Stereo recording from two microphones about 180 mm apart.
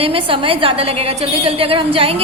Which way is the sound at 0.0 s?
30° right (ahead or behind).